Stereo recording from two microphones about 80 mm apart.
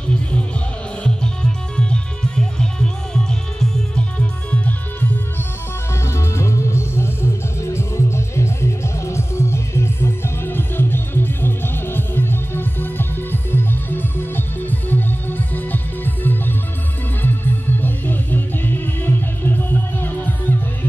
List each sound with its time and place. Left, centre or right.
1.0 s music: centre
6.0 s music: left